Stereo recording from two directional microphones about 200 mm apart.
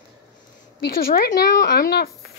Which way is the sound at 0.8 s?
50° left (ahead or behind).